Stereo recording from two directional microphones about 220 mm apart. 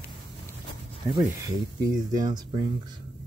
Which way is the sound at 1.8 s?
15° right (ahead or behind).